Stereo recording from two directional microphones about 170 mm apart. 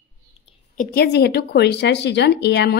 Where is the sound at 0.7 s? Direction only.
70° left (ahead or behind).